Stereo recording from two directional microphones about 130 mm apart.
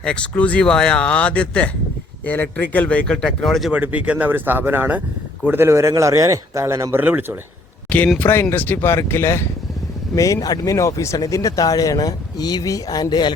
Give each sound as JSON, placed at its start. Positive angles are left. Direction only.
{"t": 0.0, "sound": "speech", "side_deg": 10}
{"t": 3.7, "sound": "speech", "side_deg": -10}
{"t": 7.9, "sound": "speech", "side_deg": 10}